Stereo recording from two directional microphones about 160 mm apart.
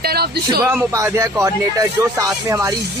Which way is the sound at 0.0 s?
80° right.